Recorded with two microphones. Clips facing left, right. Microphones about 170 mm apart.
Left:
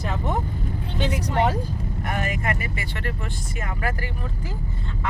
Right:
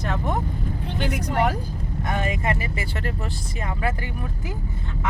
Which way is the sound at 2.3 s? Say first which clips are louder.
Right 2 dB; 25° right (ahead or behind).